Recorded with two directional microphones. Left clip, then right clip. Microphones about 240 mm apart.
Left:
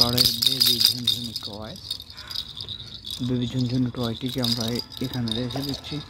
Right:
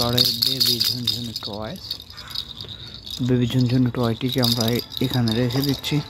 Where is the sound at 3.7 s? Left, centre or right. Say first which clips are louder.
Right 5 dB; centre.